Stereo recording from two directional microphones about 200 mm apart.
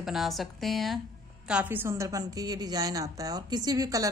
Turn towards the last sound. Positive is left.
turn(degrees=-15)  # may be behind; listen again after turning